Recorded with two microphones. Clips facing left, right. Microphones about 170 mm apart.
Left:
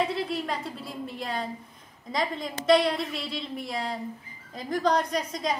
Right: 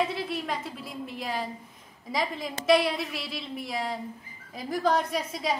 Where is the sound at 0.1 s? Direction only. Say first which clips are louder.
Left 2 dB; centre (ahead or behind).